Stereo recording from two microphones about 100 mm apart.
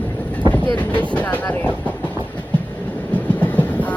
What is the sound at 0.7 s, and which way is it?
Speech, 15° left (ahead or behind).